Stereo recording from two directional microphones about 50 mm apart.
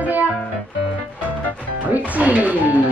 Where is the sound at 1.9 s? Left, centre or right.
Right.